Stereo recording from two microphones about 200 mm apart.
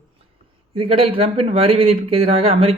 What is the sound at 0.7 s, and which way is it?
Speech, 30° right (ahead or behind).